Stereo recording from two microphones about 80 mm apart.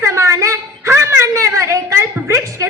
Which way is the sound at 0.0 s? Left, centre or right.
Right.